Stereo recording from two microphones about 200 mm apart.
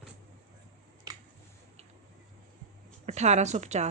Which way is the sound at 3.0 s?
35° right (ahead or behind).